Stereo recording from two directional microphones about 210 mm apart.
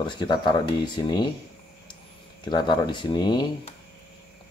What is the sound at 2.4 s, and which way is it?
Speech, 20° left (ahead or behind).